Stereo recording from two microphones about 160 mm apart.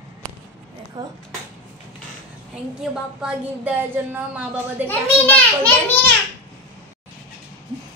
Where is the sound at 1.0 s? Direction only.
25° right (ahead or behind).